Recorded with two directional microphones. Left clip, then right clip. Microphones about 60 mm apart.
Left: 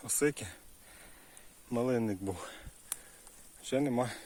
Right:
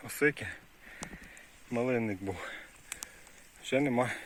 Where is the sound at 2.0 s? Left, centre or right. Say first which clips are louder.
Right 1 dB; left.